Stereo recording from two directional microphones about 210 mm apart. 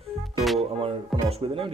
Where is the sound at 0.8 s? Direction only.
25° right (ahead or behind).